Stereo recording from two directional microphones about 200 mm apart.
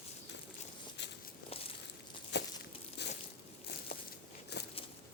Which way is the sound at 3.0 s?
55° left (ahead or behind).